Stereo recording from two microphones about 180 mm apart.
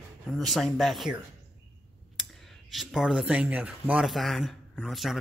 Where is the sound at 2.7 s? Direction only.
Centre (ahead or behind).